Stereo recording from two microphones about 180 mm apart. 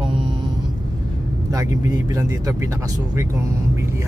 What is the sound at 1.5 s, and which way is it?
Speech, 20° right (ahead or behind).